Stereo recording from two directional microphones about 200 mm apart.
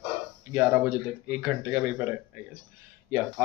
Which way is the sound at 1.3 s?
5° right (ahead or behind).